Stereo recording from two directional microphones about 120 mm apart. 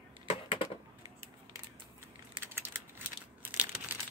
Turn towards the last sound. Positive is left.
turn(degrees=-15)  # may be behind; listen again after turning